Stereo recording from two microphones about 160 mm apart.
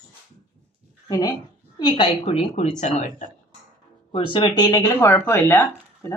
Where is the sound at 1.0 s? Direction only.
25° left (ahead or behind).